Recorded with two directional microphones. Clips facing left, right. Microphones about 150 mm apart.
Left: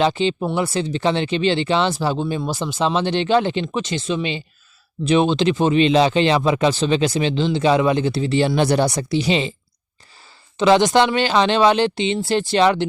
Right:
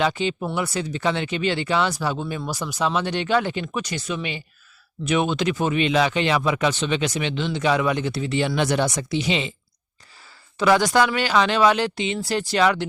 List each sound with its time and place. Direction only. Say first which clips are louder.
0.0 s speech: left 4 dB; 30° left (ahead or behind)
10.6 s speech: left 4 dB; 20° left (ahead or behind)